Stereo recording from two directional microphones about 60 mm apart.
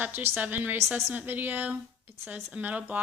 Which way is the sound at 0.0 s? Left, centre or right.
Right.